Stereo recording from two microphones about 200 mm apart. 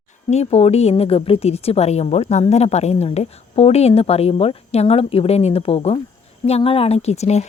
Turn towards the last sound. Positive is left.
turn(degrees=35)  # may be behind; listen again after turning